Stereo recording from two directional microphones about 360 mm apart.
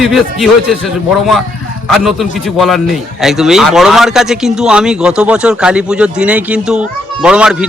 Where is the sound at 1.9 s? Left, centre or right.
Centre.